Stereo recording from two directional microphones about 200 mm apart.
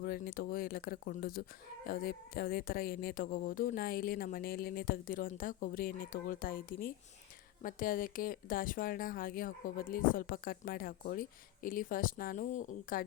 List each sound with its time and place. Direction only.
0.0 s speech: 45° left (ahead or behind)